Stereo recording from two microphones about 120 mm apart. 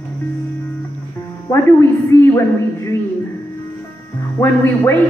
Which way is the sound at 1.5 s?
20° left (ahead or behind).